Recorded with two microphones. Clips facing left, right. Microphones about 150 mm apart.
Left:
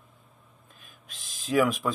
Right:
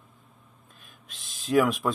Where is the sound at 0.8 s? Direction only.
Centre (ahead or behind).